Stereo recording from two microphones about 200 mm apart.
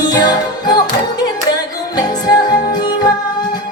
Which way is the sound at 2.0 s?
20° left (ahead or behind).